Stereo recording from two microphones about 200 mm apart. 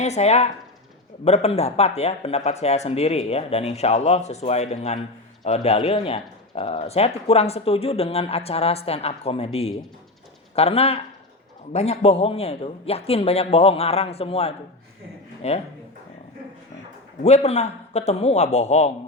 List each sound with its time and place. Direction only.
0.0 s a man's voice: 35° left (ahead or behind)
17.2 s speech: 35° left (ahead or behind)